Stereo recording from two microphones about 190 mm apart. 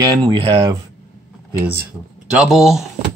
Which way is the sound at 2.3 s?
Centre (ahead or behind).